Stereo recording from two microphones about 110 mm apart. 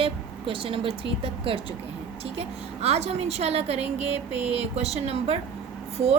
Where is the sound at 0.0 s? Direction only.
55° right (ahead or behind).